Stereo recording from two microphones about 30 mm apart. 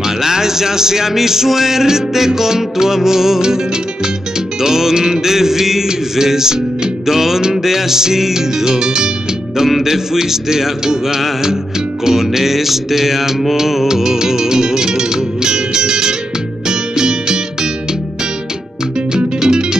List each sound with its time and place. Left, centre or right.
0.2 s music: centre
4.6 s music: centre
13.8 s music: centre
19.1 s music: right